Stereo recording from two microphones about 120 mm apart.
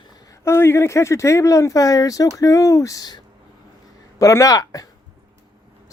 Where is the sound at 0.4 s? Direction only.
20° left (ahead or behind).